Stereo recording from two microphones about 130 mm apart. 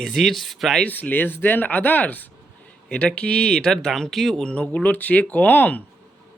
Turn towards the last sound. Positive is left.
turn(degrees=10)  # may be behind; listen again after turning